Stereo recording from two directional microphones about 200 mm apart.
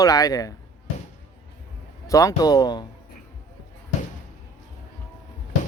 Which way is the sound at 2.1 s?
15° left (ahead or behind).